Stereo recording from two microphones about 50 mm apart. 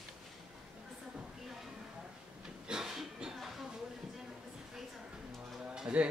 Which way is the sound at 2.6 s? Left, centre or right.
Centre.